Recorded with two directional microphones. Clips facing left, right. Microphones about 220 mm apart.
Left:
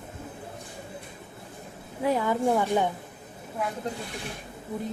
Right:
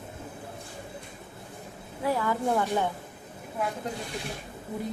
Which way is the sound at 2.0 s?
20° left (ahead or behind).